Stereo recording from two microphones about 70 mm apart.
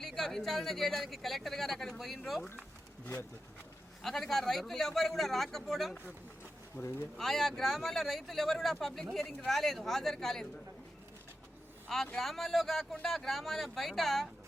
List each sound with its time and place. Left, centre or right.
0.0 s speech: centre
4.0 s speech: centre
6.8 s speech: left
7.2 s speech: centre
12.1 s speech: centre